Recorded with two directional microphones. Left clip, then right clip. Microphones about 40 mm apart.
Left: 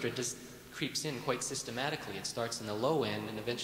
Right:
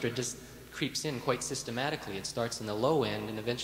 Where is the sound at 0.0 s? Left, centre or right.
Left.